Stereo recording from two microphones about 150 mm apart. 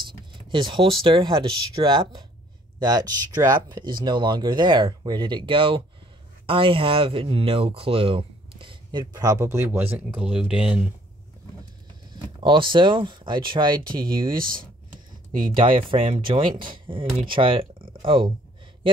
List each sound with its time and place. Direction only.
0.5 s speech: 35° right (ahead or behind); by 10.8 s 5° right (ahead or behind)
12.1 s speech: 35° right (ahead or behind)
14.2 s speech: 70° right (ahead or behind)
15.3 s speech: 35° right (ahead or behind)